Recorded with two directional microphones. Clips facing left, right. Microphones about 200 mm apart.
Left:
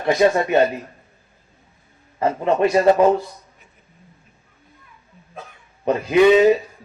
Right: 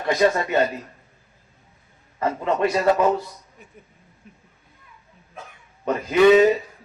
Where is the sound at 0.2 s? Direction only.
25° left (ahead or behind).